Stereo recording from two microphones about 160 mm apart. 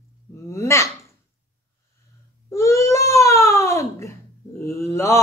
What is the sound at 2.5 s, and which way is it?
Baby cry, 20° left (ahead or behind).